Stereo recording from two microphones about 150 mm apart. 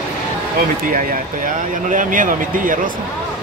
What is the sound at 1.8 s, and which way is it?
Speech, 60° right (ahead or behind).